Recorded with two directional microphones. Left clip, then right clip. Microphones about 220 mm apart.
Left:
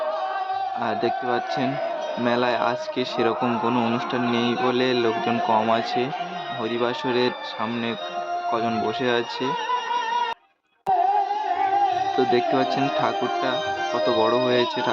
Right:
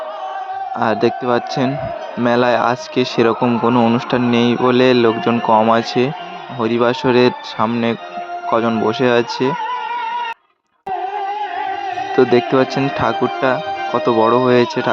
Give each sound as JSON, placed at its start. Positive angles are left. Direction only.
{"t": 0.8, "sound": "speech", "side_deg": -35}
{"t": 12.1, "sound": "speech", "side_deg": -35}